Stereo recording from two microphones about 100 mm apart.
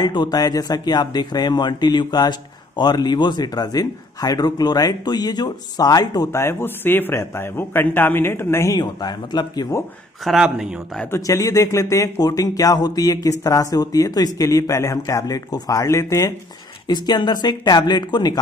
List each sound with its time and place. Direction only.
0.0 s speech: 45° left (ahead or behind)
6.4 s a man's voice: 20° left (ahead or behind)
8.7 s speech: 45° left (ahead or behind)
10.2 s speech: 5° right (ahead or behind)
11.1 s speech: 30° left (ahead or behind)
16.8 s speech: 45° left (ahead or behind)